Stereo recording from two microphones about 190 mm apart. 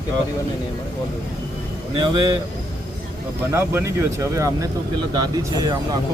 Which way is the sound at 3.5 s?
15° right (ahead or behind).